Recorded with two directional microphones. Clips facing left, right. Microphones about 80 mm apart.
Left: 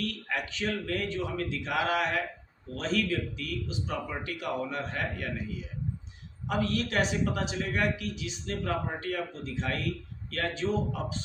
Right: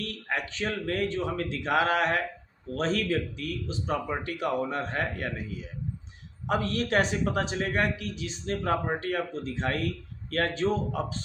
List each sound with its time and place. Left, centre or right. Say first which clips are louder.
0.3 s a man's voice: right 3 dB; right
6.5 s a man's voice: right 3 dB; right